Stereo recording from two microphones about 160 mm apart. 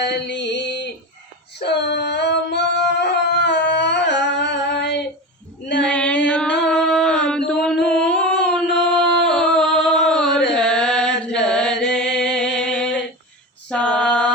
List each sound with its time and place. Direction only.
0.0 s a sound: 90° left
5.8 s female singing: 5° left (ahead or behind)
6.2 s music: 5° left (ahead or behind)
6.7 s a sound: 5° left (ahead or behind)
8.7 s music: 5° left (ahead or behind)
10.5 s chant: 5° left (ahead or behind)
11.7 s chant: 90° left
12.0 s music: 90° left
12.5 s a sound: 90° left
13.7 s female singing: 5° left (ahead or behind)